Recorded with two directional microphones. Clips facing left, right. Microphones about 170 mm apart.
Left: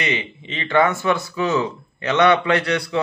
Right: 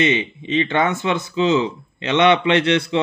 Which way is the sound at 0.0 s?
25° right (ahead or behind).